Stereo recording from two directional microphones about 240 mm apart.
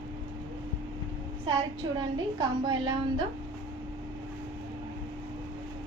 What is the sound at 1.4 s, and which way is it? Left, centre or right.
A woman's voice, centre.